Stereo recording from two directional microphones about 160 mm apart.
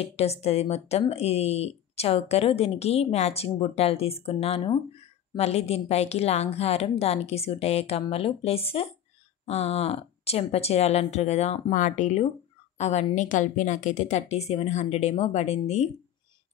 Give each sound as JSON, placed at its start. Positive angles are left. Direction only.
{"t": 0.0, "sound": "a woman's voice", "side_deg": 40}